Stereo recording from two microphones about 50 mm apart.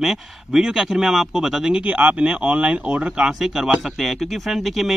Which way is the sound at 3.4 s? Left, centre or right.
Centre.